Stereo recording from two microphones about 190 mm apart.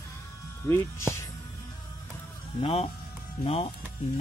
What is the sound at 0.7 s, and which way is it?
Speech, 15° left (ahead or behind).